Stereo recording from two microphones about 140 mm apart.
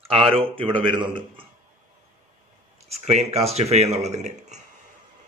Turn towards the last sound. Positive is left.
turn(degrees=-55)  # may be behind; listen again after turning